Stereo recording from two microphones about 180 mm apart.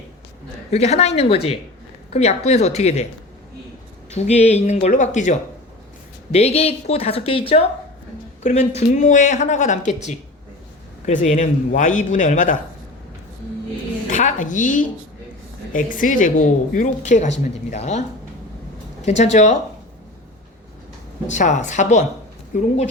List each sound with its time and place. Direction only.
0.7 s a woman's voice: 35° left (ahead or behind)
4.1 s a woman's voice: 40° left (ahead or behind)
14.1 s a woman's voice: 45° left (ahead or behind)
19.0 s a woman's voice: 40° left (ahead or behind)
21.2 s a woman's voice: 40° left (ahead or behind)